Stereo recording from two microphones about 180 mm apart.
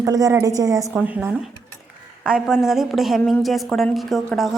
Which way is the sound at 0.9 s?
5° right (ahead or behind).